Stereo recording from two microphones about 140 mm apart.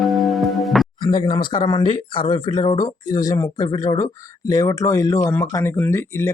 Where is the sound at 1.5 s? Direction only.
35° left (ahead or behind).